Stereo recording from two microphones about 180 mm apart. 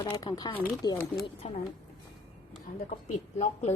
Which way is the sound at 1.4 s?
35° left (ahead or behind).